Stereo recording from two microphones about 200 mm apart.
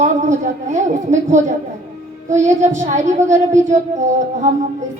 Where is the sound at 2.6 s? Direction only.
35° right (ahead or behind).